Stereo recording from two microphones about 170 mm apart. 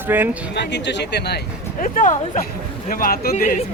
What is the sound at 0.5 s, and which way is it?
Speech, 85° left.